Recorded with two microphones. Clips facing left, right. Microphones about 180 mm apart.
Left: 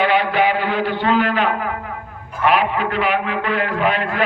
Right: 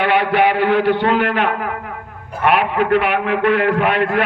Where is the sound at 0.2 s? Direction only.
65° right (ahead or behind).